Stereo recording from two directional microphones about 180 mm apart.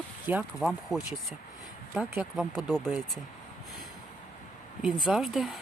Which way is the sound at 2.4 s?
Centre (ahead or behind).